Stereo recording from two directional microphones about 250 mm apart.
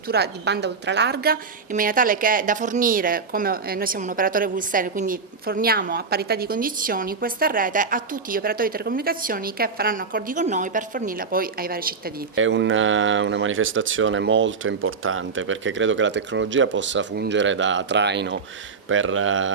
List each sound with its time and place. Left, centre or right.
0.1 s a woman's voice: right
12.4 s speech: right